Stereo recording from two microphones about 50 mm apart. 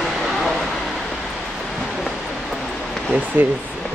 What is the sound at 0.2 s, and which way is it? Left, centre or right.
Vehicle, centre.